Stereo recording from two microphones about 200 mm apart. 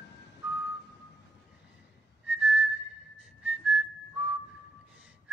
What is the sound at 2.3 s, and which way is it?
Whistling, 5° right (ahead or behind).